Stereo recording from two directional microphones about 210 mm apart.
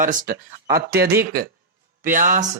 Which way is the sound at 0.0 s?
40° right (ahead or behind).